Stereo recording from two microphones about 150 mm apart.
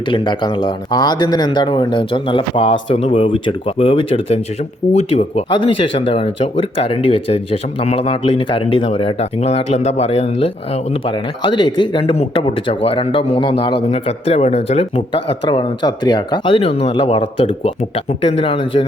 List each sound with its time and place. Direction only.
0.1 s speech: 30° left (ahead or behind)
5.5 s speech: 35° left (ahead or behind)
11.0 s speech: 30° left (ahead or behind)